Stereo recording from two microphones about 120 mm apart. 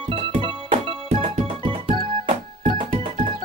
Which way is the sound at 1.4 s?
50° right (ahead or behind).